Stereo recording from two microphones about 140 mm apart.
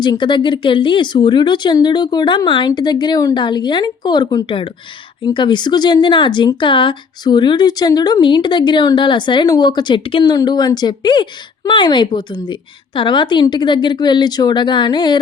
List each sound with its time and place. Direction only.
0.0 s speech: 35° left (ahead or behind)